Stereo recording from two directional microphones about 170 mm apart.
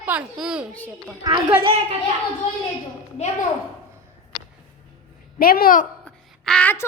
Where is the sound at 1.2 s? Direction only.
20° right (ahead or behind).